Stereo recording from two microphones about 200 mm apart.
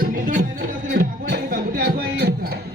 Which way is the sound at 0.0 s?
45° right (ahead or behind).